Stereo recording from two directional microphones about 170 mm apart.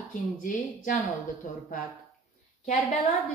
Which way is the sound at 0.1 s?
50° left (ahead or behind).